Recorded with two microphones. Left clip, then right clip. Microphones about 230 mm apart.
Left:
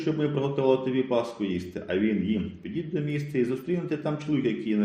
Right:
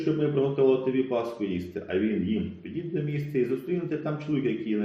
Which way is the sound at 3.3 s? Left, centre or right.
Left.